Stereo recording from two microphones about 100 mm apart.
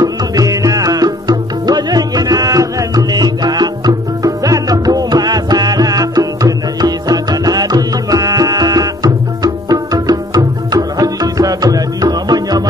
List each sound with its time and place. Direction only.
0.0 s music: 35° right (ahead or behind)